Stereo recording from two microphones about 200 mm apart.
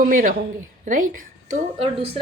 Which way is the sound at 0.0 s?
40° right (ahead or behind).